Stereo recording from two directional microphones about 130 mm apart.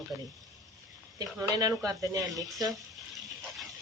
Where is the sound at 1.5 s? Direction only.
30° right (ahead or behind).